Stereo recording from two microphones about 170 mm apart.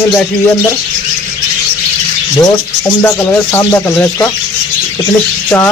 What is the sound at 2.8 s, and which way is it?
Speech, 15° left (ahead or behind).